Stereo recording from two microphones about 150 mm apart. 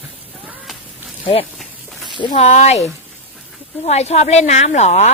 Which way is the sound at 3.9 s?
45° left (ahead or behind).